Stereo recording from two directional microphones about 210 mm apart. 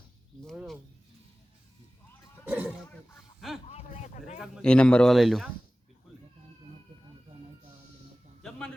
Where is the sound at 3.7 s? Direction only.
30° left (ahead or behind).